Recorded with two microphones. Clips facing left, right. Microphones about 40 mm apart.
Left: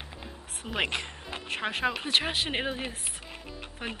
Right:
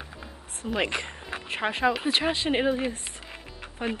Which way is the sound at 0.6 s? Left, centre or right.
Centre.